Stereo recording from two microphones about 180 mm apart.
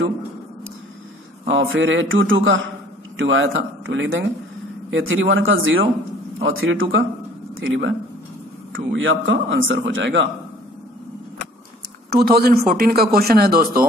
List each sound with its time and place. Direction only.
1.5 s a man's voice: 90° right
12.1 s speech: 60° right (ahead or behind)